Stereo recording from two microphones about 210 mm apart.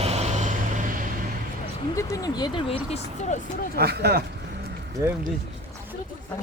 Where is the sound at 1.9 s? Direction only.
15° left (ahead or behind); by 3.4 s 30° left (ahead or behind).